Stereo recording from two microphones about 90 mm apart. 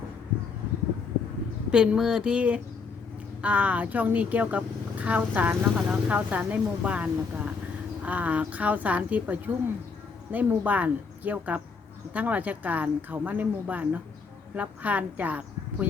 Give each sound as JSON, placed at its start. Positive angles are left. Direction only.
{"t": 1.7, "sound": "a woman's voice", "side_deg": -10}